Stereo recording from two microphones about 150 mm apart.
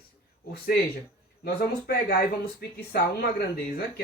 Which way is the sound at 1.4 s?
90° left.